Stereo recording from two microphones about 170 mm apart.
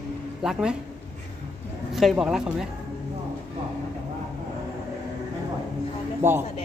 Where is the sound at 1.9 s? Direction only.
Centre (ahead or behind).